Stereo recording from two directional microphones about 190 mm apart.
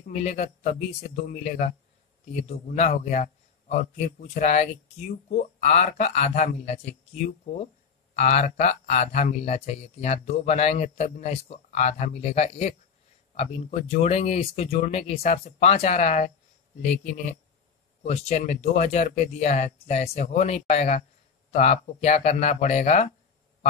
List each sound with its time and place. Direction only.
0.1 s speech: 35° left (ahead or behind)
18.0 s speech: 35° left (ahead or behind)